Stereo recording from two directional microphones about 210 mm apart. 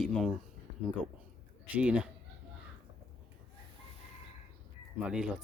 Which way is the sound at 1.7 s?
5° right (ahead or behind).